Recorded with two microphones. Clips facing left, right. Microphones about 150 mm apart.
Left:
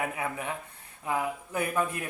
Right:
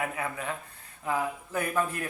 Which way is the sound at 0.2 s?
15° left (ahead or behind).